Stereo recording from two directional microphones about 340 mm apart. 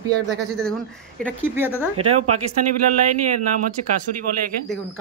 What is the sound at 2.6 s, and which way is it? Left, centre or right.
Speech, right.